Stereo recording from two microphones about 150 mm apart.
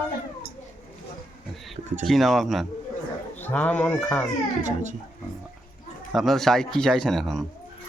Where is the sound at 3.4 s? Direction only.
10° left (ahead or behind).